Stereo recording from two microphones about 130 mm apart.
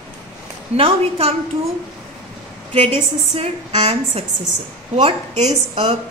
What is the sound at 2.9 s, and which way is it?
A woman's voice, 50° right (ahead or behind).